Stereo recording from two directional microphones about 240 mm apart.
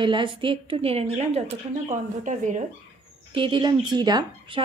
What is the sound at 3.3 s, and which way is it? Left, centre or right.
A woman's voice, centre.